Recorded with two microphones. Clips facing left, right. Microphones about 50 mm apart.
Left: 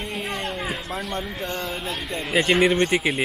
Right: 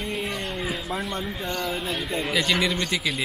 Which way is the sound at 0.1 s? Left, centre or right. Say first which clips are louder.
Left 1 dB; left.